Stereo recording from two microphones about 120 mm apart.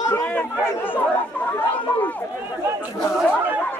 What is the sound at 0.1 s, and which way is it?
Chatter, 10° left (ahead or behind).